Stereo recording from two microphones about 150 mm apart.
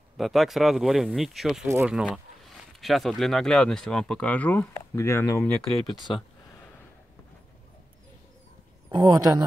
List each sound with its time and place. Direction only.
0.2 s speech: centre (ahead or behind); by 5.5 s 15° left (ahead or behind)
5.9 s speech: 30° left (ahead or behind)
8.9 s speech: 25° right (ahead or behind)